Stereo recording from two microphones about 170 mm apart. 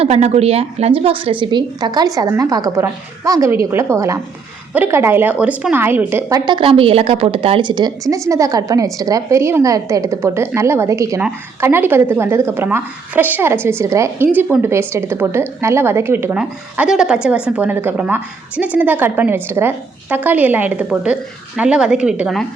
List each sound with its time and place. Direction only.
0.0 s a woman's voice: 40° right (ahead or behind); by 22.4 s centre (ahead or behind)